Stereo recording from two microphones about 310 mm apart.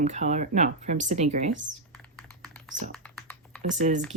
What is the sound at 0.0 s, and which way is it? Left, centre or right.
Speech, right.